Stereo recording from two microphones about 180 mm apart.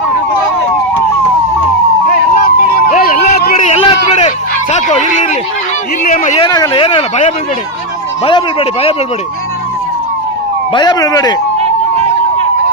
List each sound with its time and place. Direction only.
2.4 s a sound: 60° left (ahead or behind)
3.7 s a sound: 40° left (ahead or behind)
4.7 s speech: 40° left (ahead or behind)
6.4 s speech: 25° left (ahead or behind)
8.2 s speech: 30° left (ahead or behind)
10.8 s speech: 20° left (ahead or behind)